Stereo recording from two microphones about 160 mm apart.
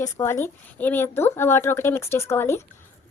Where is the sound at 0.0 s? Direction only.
15° left (ahead or behind).